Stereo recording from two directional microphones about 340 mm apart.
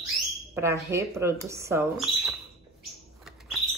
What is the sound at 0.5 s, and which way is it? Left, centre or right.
Speech, centre.